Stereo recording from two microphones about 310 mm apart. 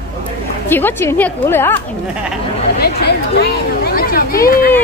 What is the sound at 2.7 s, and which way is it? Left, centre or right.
Speech, left.